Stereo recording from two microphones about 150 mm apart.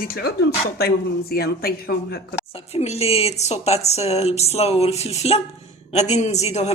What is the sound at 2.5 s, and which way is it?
Speech, 40° left (ahead or behind).